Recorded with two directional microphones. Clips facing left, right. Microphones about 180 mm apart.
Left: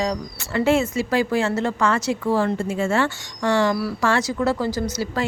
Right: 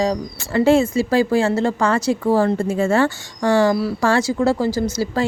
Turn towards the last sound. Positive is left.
turn(degrees=-35)  # may be behind; listen again after turning